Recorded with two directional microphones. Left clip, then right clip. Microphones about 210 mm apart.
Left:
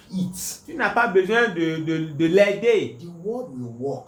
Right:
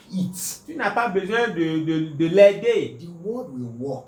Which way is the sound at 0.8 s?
45° left (ahead or behind).